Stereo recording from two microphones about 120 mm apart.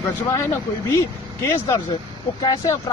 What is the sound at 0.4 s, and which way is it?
Speech, 25° left (ahead or behind).